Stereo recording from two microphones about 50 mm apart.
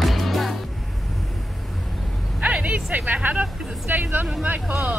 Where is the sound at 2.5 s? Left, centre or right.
Right.